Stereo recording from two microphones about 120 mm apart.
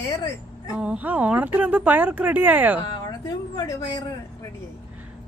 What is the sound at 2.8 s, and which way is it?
Speech, 35° left (ahead or behind).